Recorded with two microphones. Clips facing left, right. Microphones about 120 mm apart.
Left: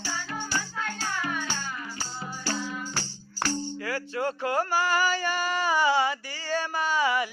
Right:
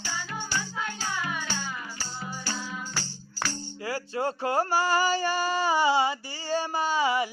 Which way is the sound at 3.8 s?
35° right (ahead or behind).